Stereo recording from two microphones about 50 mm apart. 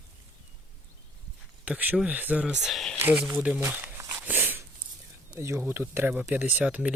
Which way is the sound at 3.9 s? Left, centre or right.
Right.